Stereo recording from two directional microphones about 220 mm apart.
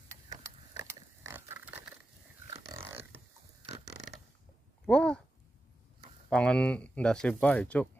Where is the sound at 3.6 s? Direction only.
30° right (ahead or behind).